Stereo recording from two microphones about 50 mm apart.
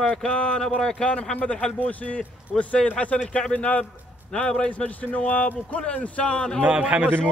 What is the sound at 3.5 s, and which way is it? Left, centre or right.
A man's voice, left.